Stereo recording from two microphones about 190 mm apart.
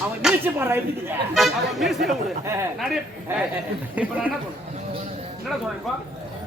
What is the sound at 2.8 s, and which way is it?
Speech, 5° right (ahead or behind).